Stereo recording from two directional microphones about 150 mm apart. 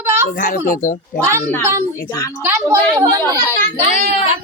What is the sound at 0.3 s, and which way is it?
Speech, 70° left (ahead or behind).